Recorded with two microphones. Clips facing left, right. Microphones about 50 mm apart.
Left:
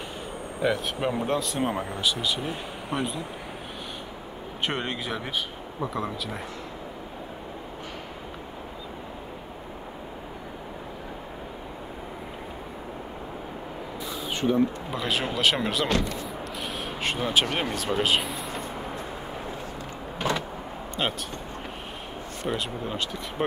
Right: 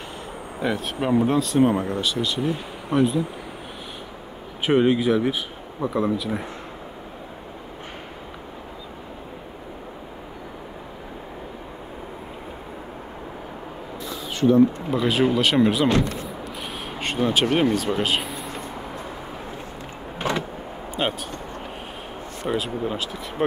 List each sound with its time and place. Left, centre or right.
0.6 s speech: centre
4.6 s speech: centre
14.0 s a sound: left
14.9 s speech: centre
17.0 s speech: centre
20.2 s power windows: right
21.0 s speech: centre
22.5 s speech: centre